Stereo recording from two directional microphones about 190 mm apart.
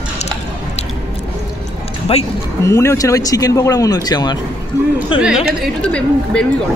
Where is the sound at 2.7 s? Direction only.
15° left (ahead or behind).